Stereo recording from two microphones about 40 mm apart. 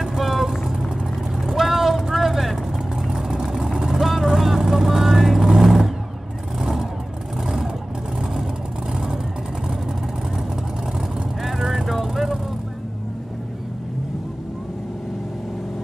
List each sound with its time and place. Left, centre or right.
0.0 s vehicle: centre
3.9 s vehicle: centre
11.4 s vehicle: centre